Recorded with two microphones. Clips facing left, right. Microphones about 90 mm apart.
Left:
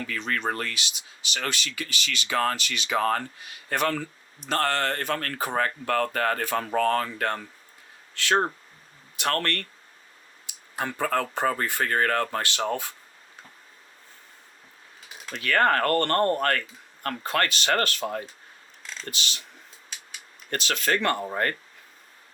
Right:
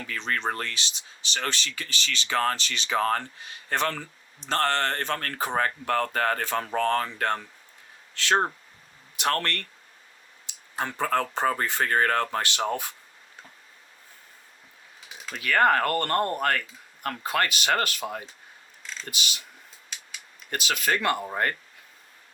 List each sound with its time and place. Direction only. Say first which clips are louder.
0.1 s speech: right 1 dB; 30° right (ahead or behind)
3.0 s speech: left 1 dB; 35° left (ahead or behind)
3.3 s speech: even; 30° right (ahead or behind)
9.1 s speech: even; 20° right (ahead or behind)
10.8 s speech: even; 25° right (ahead or behind)
15.3 s speech: right 1 dB; 10° right (ahead or behind)
20.5 s speech: left 1 dB; 5° right (ahead or behind)